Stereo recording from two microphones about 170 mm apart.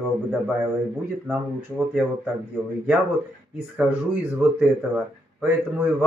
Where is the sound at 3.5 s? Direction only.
5° right (ahead or behind).